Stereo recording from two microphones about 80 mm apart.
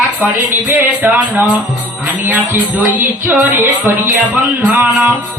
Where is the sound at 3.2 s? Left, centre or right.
Right.